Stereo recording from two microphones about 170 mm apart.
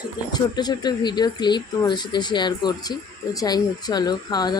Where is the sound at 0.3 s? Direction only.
25° left (ahead or behind).